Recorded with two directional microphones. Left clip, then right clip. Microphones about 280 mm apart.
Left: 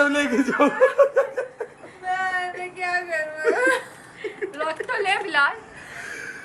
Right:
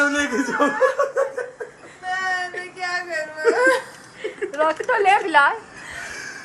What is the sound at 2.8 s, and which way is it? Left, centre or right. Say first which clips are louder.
Whimper: left 1 dB; centre.